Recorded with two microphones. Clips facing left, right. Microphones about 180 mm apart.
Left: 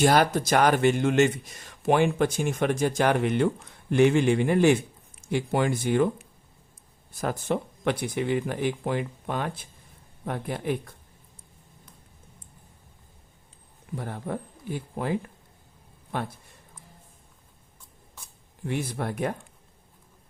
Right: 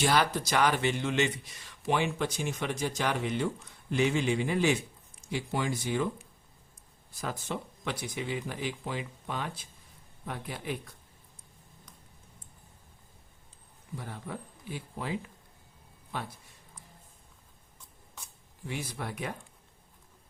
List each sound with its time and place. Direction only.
0.0 s speech: 50° left (ahead or behind)
13.9 s speech: 55° left (ahead or behind)
16.1 s a sound: 55° left (ahead or behind)
18.6 s speech: 55° left (ahead or behind)